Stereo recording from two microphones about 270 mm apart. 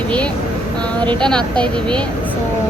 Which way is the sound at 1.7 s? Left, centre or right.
Centre.